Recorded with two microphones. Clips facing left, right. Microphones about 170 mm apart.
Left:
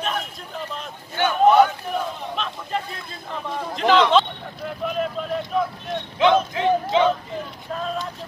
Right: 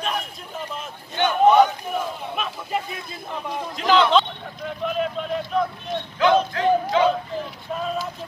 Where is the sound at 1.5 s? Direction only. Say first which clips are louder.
Even; centre (ahead or behind).